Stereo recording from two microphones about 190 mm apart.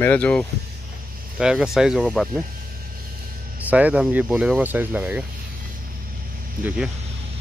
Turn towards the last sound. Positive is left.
turn(degrees=-5)  # may be behind; listen again after turning